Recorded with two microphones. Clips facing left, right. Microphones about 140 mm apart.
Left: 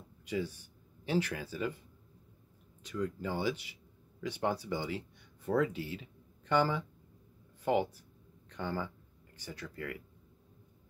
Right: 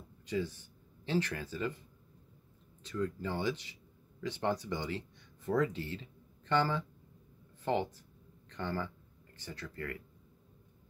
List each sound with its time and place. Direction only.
0.2 s speech: 10° left (ahead or behind)
2.8 s speech: 10° left (ahead or behind)